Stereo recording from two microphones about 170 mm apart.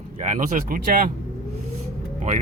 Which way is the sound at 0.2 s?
50° right (ahead or behind).